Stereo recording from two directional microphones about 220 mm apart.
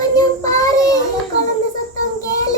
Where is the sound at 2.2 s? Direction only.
15° left (ahead or behind).